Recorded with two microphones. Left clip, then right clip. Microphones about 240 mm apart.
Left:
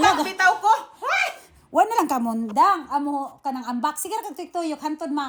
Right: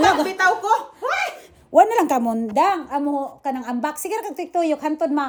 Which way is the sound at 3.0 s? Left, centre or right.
Left.